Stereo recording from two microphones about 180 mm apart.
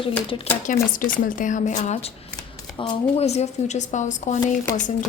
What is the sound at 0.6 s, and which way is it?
Speech, 45° left (ahead or behind).